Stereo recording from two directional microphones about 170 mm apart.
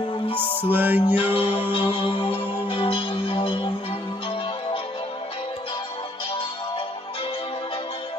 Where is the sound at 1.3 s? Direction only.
35° left (ahead or behind).